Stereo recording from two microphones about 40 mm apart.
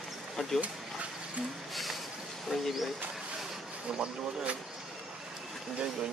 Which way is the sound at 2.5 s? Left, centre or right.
Centre.